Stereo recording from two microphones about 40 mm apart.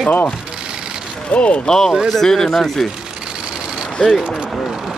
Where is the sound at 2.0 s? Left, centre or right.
Centre.